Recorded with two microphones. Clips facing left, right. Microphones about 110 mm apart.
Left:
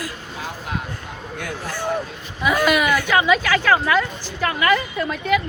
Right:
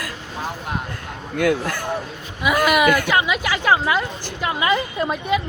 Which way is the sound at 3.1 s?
10° right (ahead or behind).